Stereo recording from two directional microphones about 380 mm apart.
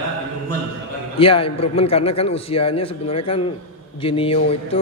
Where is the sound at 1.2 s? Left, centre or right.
Centre.